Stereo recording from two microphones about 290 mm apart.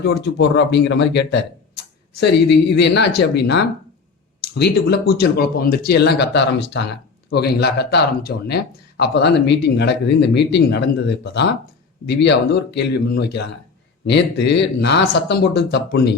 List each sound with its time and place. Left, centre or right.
0.0 s speech: left